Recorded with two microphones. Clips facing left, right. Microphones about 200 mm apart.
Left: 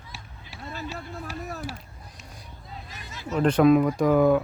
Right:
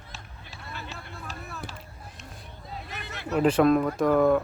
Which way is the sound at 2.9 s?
65° right (ahead or behind).